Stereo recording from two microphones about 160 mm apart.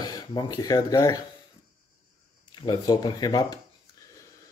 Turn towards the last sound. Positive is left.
turn(degrees=25)  # may be behind; listen again after turning